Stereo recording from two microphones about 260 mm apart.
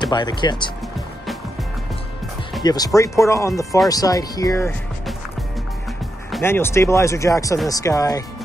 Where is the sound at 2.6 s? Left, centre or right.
Centre.